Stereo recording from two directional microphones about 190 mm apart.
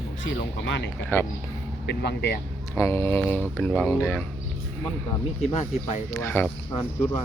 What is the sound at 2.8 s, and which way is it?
Speech, 15° left (ahead or behind).